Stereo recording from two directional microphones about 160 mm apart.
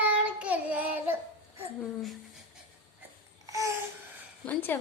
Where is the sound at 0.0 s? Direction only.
10° right (ahead or behind).